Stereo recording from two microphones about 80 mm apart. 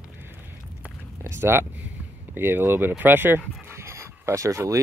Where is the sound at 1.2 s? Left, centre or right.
Right.